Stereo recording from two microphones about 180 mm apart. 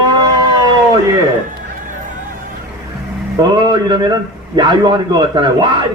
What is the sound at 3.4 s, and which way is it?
A man's voice, 25° right (ahead or behind).